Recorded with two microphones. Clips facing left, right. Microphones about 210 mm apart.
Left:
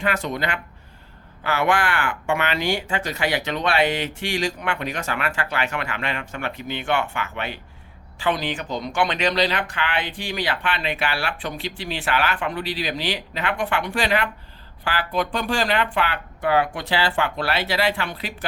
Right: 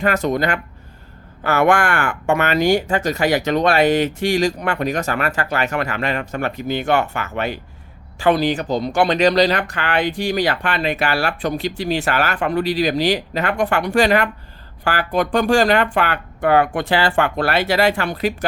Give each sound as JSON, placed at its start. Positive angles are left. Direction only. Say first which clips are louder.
{"t": 0.0, "sound": "speech", "louder": "right 6 dB", "side_deg": -40}